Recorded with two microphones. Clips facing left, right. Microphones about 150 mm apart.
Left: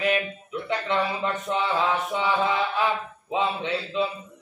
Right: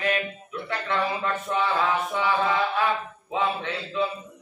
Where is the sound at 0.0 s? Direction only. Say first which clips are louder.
Left 2 dB; 20° left (ahead or behind).